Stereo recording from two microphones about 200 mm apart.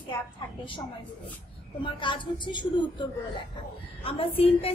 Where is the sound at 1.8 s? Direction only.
25° left (ahead or behind).